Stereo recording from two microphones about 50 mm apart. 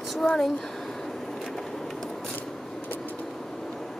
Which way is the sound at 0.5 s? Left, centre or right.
Centre.